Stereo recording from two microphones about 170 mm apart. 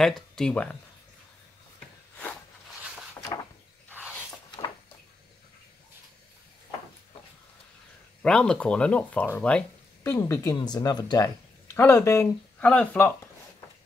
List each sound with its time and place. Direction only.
0.0 s speech: 5° left (ahead or behind)
8.2 s speech: 5° left (ahead or behind); by 11.2 s 25° left (ahead or behind)
11.2 s speech: 15° left (ahead or behind)